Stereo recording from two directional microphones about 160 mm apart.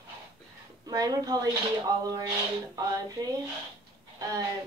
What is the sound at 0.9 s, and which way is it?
A woman's voice, 25° right (ahead or behind).